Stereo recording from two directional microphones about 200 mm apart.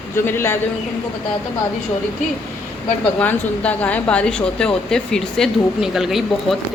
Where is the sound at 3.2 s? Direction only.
10° left (ahead or behind).